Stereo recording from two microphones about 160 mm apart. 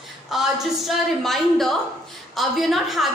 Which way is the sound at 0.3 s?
Centre (ahead or behind).